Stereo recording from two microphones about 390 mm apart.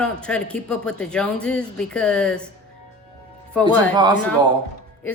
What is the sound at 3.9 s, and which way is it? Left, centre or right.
Speech, centre.